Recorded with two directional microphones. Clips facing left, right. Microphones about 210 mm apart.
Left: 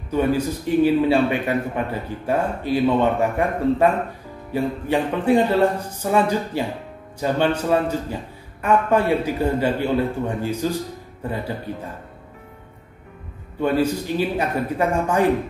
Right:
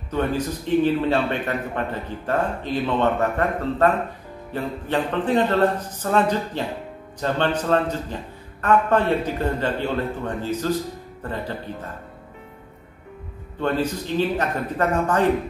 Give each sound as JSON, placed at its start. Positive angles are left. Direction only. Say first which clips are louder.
{"t": 0.1, "sound": "a man's voice", "louder": "left 3 dB", "side_deg": 10}
{"t": 13.6, "sound": "a man's voice", "louder": "left 3 dB", "side_deg": 10}